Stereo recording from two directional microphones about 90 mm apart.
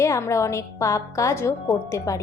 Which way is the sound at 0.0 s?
35° left (ahead or behind).